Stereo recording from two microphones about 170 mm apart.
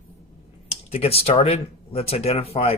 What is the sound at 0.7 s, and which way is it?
Speech, 35° left (ahead or behind).